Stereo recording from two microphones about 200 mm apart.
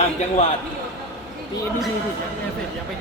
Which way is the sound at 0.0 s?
35° left (ahead or behind).